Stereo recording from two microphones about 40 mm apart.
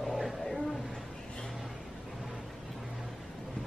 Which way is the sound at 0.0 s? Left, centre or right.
Centre.